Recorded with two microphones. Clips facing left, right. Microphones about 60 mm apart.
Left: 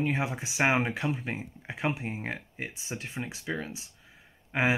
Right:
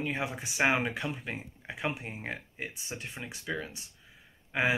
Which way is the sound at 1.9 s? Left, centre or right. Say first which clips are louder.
Left 5 dB; left.